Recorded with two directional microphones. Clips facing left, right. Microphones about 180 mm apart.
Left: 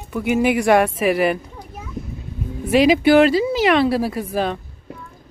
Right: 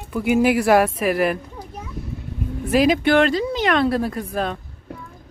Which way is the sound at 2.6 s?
Centre (ahead or behind).